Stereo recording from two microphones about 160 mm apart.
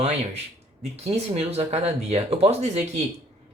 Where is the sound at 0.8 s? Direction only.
40° right (ahead or behind).